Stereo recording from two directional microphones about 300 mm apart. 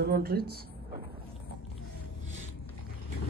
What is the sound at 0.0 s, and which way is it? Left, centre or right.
Speech, right.